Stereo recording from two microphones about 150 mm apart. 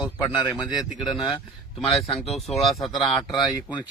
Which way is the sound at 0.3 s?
25° left (ahead or behind).